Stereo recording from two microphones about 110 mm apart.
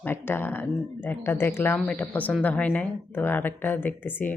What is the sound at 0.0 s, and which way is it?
Speech, 20° left (ahead or behind).